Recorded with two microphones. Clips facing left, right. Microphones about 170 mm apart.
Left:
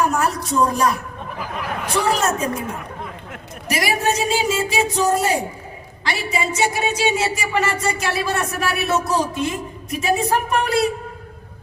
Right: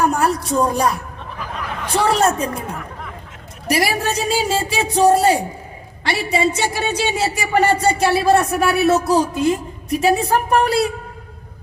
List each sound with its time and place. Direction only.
0.0 s a sound: 35° right (ahead or behind)
1.9 s speech: 30° right (ahead or behind)
3.7 s speech: 35° right (ahead or behind)